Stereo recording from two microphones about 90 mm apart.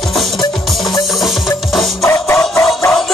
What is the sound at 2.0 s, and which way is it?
Music, 30° left (ahead or behind).